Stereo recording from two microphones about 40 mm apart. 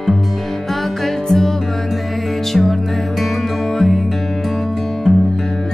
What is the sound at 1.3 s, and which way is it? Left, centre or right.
Music, centre.